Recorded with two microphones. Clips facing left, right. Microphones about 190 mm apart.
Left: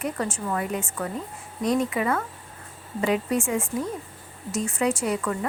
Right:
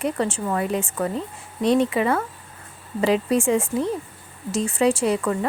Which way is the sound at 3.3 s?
30° right (ahead or behind).